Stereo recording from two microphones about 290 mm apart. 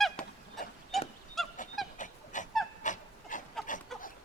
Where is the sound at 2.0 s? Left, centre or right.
Left.